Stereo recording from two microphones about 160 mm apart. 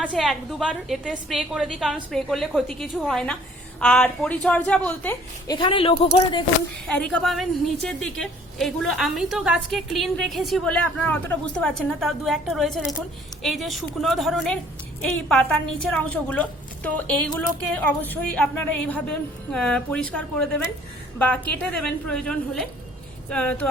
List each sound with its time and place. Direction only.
0.0 s a woman's voice: 5° left (ahead or behind)
5.5 s speech: 30° left (ahead or behind)
6.8 s a woman's voice: 5° left (ahead or behind)